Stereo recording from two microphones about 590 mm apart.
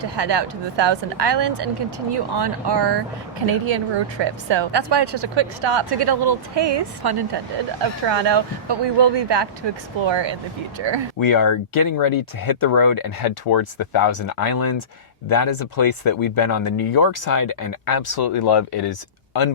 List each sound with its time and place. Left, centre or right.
0.0 s a woman's voice: right
11.2 s speech: left